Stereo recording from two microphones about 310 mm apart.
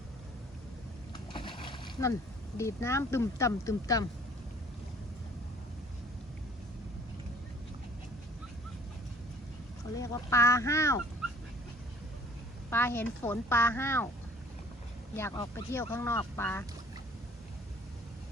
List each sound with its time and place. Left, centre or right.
1.1 s boat: centre
2.6 s speech: centre
10.0 s speech: centre
12.7 s speech: centre
15.1 s speech: centre